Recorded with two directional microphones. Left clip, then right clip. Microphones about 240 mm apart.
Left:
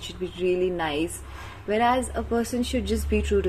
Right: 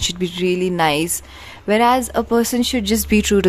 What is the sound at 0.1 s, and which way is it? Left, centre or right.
A woman's voice, right.